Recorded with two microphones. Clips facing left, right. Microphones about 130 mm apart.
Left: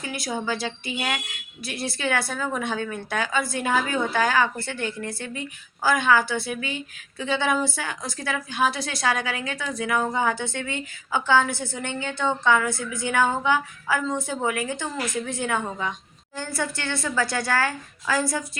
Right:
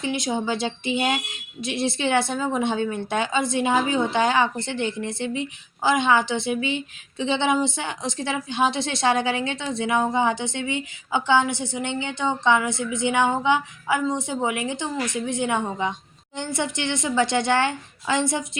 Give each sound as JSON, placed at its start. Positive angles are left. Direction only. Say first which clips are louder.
{"t": 0.0, "sound": "speech", "louder": "right 4 dB", "side_deg": -20}